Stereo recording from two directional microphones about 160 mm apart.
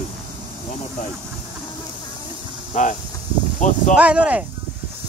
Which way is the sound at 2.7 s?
50° left (ahead or behind).